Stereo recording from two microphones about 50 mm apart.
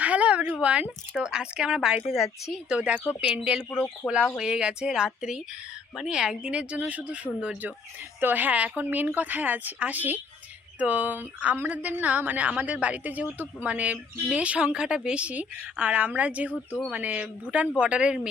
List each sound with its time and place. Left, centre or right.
0.0 s a sound: right
0.6 s a woman's voice: right
2.1 s speech: centre
2.6 s a woman's voice: right
4.0 s speech: centre
4.4 s a woman's voice: centre
8.2 s a woman's voice: right; by 18.3 s centre